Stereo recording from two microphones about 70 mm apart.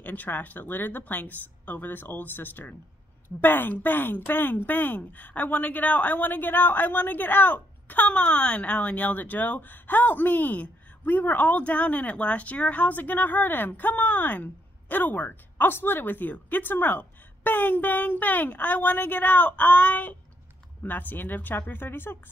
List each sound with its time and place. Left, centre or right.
0.0 s speech: left